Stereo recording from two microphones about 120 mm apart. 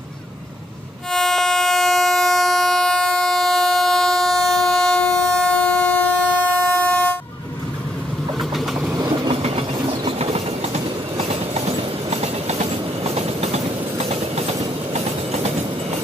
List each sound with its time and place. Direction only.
1.1 s train: 5° left (ahead or behind)
8.4 s vehicle: centre (ahead or behind)
9.3 s train: 55° right (ahead or behind)